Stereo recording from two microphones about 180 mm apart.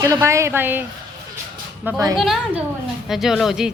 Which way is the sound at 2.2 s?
Centre (ahead or behind).